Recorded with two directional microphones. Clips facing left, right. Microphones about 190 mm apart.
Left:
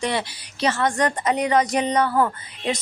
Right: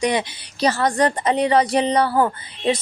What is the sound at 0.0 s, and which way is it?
Speech, 15° right (ahead or behind).